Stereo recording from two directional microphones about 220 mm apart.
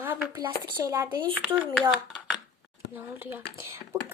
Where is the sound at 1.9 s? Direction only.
Centre (ahead or behind).